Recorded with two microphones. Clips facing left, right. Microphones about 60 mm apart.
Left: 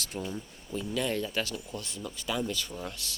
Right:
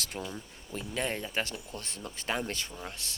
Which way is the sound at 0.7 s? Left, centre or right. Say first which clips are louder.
Left 3 dB; right.